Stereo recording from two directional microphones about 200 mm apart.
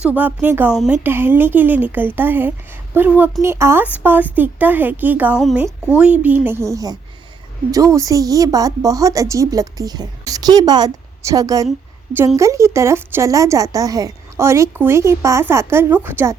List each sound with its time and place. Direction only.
0.0 s a woman's voice: 10° right (ahead or behind)